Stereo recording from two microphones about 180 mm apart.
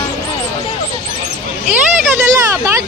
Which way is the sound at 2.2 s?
15° right (ahead or behind).